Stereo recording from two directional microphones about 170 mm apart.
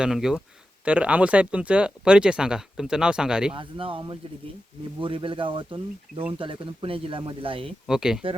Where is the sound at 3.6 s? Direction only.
30° right (ahead or behind).